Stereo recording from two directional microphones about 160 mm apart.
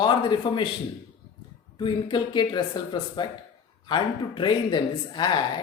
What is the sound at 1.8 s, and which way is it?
A man's voice, 30° left (ahead or behind).